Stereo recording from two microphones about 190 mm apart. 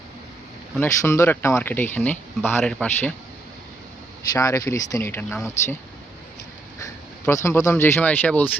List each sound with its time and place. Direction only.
0.8 s a man's voice: 15° left (ahead or behind)
4.4 s speech: 15° left (ahead or behind)
7.4 s speech: 15° left (ahead or behind)